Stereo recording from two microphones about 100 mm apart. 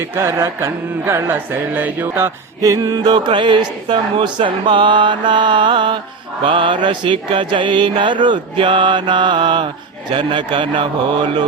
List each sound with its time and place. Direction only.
0.0 s mantra: 25° right (ahead or behind)
2.6 s a man's voice: 35° right (ahead or behind); by 11.4 s 60° right (ahead or behind)